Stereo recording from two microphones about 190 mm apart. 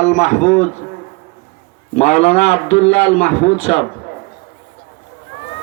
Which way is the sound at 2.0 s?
35° left (ahead or behind).